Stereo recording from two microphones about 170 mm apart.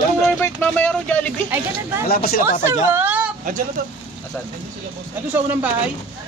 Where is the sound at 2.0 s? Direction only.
60° left (ahead or behind).